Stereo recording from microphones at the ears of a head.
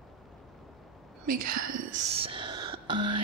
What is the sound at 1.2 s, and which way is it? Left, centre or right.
Whispering, right.